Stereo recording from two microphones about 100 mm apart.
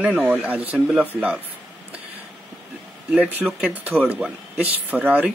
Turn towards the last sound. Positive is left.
turn(degrees=-15)  # may be behind; listen again after turning